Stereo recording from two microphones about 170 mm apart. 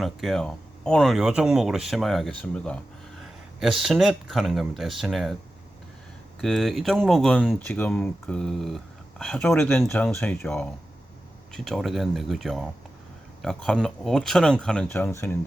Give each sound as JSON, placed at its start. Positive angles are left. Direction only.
{"t": 0.0, "sound": "speech", "side_deg": 0}
{"t": 6.4, "sound": "speech", "side_deg": 0}